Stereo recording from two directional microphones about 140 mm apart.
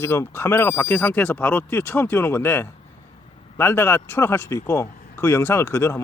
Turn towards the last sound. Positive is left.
turn(degrees=20)  # may be behind; listen again after turning